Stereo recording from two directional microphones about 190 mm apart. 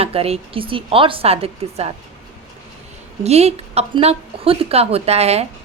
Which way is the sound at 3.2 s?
35° right (ahead or behind).